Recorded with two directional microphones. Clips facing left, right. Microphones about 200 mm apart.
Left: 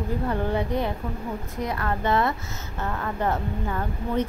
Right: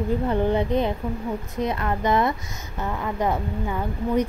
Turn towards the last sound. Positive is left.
turn(degrees=-10)  # may be behind; listen again after turning